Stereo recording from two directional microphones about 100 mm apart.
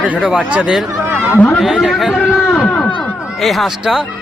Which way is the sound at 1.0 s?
20° right (ahead or behind).